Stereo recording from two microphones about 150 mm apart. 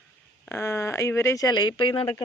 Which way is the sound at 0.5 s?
20° left (ahead or behind).